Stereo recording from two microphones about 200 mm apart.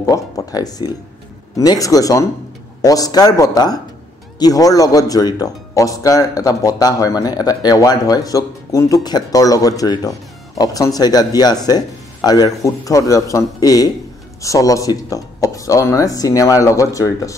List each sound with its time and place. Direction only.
0.0 s speech: 15° left (ahead or behind)